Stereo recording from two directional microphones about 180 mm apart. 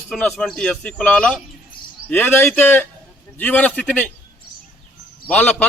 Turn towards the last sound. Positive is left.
turn(degrees=5)  # may be behind; listen again after turning